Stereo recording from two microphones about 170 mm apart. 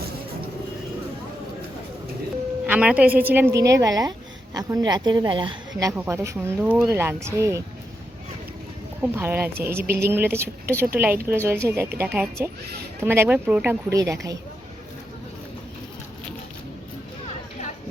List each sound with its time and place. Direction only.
2.6 s a woman's voice: 10° right (ahead or behind); by 5.9 s 30° right (ahead or behind)
6.0 s a woman's voice: 15° right (ahead or behind)
9.0 s a woman's voice: 10° right (ahead or behind)
13.9 s a woman's voice: 20° right (ahead or behind)